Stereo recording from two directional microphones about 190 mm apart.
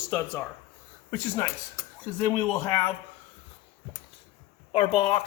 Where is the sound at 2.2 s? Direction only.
15° left (ahead or behind).